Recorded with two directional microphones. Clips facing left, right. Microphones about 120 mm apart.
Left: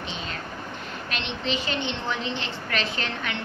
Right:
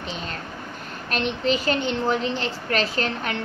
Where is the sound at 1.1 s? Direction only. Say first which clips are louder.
Right 7 dB; 45° right (ahead or behind).